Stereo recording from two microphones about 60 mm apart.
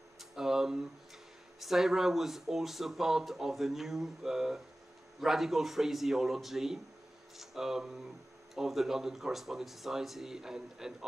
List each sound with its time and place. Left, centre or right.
0.2 s speech: centre